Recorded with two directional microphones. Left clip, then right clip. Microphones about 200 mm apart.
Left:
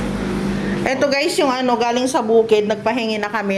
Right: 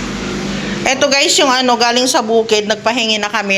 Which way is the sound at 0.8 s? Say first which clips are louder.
Right 5 dB; 10° left (ahead or behind).